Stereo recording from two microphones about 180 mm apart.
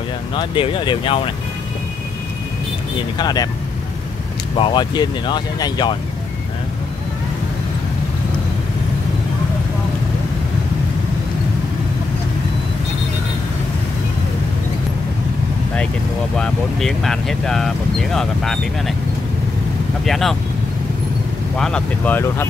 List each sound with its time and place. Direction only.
0.3 s speech: 30° left (ahead or behind)
3.2 s speech: 25° left (ahead or behind)
4.6 s speech: 25° left (ahead or behind)
16.3 s speech: centre (ahead or behind)
20.1 s speech: centre (ahead or behind)
21.5 s speech: 5° left (ahead or behind)